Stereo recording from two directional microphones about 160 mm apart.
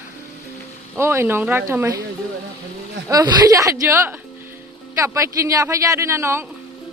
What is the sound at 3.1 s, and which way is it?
Speech, 25° right (ahead or behind).